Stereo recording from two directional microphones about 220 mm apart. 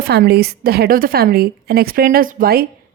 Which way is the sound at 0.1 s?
45° right (ahead or behind).